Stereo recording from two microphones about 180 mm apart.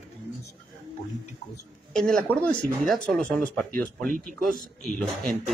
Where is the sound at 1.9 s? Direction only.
5° left (ahead or behind).